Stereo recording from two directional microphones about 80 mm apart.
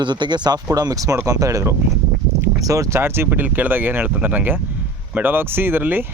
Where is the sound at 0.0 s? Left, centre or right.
Right.